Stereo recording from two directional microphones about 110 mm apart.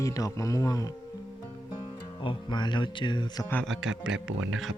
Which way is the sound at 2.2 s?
45° left (ahead or behind).